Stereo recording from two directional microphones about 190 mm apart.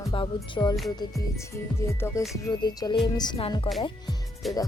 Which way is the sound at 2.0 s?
10° left (ahead or behind).